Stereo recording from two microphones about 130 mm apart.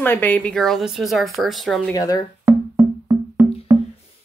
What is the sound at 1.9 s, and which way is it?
Speech, 30° left (ahead or behind).